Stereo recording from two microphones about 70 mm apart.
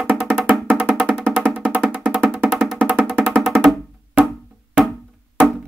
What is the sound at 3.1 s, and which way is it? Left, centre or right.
Music, centre.